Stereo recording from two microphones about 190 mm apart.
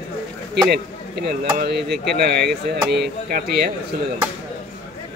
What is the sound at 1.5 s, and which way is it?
Speech, 60° right (ahead or behind).